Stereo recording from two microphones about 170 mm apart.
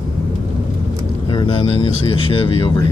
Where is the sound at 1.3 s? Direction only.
30° left (ahead or behind).